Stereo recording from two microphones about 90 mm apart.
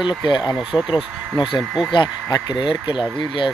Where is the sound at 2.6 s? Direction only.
65° left (ahead or behind).